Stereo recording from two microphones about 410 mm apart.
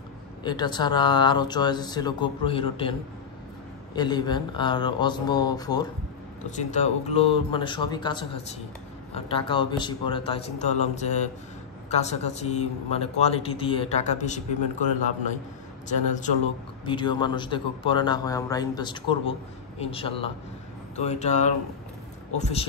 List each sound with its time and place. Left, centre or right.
0.4 s speech: centre
15.9 s speech: centre